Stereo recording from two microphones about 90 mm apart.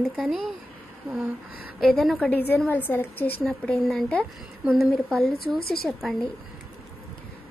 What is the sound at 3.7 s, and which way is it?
Speech, centre (ahead or behind).